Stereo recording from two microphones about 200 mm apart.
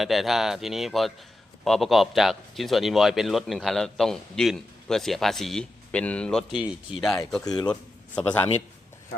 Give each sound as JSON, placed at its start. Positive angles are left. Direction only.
{"t": 0.0, "sound": "a man's voice", "side_deg": 0}
{"t": 7.4, "sound": "a man's voice", "side_deg": 20}
{"t": 7.7, "sound": "a man's voice", "side_deg": 5}